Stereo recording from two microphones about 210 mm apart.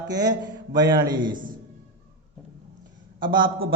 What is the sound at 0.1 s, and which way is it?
Speech, 20° right (ahead or behind).